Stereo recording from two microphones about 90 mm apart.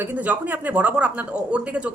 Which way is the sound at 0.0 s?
20° right (ahead or behind).